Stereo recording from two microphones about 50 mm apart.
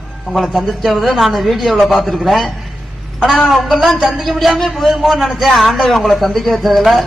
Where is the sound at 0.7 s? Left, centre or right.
Centre.